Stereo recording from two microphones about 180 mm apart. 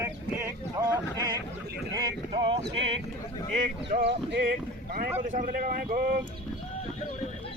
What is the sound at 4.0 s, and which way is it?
Speech, 70° right (ahead or behind).